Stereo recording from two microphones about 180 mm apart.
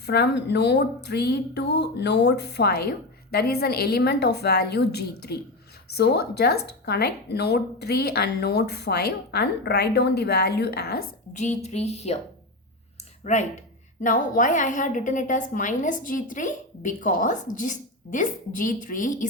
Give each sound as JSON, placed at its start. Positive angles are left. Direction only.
{"t": 0.0, "sound": "a woman's voice", "side_deg": 65}
{"t": 11.3, "sound": "speech", "side_deg": 40}
{"t": 13.3, "sound": "a woman's voice", "side_deg": 40}